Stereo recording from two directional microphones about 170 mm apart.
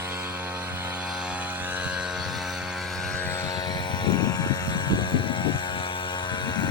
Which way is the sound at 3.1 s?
10° left (ahead or behind).